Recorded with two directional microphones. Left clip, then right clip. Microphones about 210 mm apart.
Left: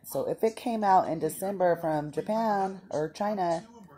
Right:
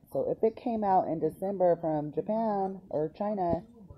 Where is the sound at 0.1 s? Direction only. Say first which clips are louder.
Even; 20° left (ahead or behind).